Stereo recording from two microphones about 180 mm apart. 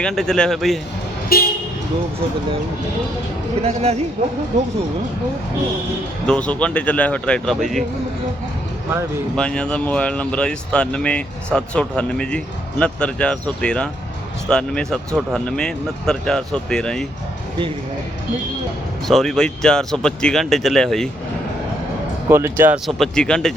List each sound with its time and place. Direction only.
0.0 s speech: 5° left (ahead or behind)
1.3 s speech: 55° left (ahead or behind)
3.6 s speech: 35° right (ahead or behind)
6.2 s speech: 5° left (ahead or behind)
9.3 s speech: 5° left (ahead or behind)
19.0 s speech: centre (ahead or behind)
22.3 s speech: 15° right (ahead or behind)
22.9 s speech: centre (ahead or behind)